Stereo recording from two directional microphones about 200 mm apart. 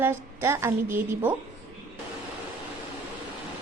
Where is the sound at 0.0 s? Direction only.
10° right (ahead or behind).